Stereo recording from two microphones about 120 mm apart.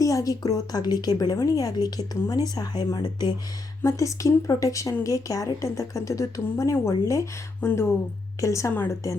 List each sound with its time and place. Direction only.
0.0 s a woman's voice: 30° left (ahead or behind)